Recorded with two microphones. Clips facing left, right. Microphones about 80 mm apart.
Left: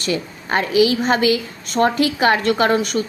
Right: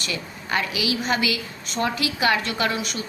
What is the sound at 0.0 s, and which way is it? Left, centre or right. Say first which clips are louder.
A woman's voice: left 8 dB; left.